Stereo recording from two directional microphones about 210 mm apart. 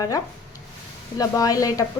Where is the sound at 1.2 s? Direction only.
15° left (ahead or behind).